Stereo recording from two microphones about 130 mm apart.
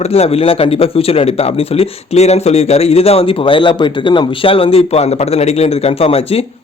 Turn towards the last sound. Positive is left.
turn(degrees=50)  # may be behind; listen again after turning